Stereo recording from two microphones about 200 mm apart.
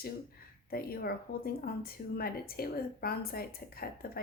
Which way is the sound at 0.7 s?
50° left (ahead or behind).